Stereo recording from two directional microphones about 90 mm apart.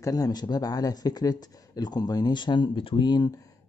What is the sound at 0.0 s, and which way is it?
Speech, 45° left (ahead or behind).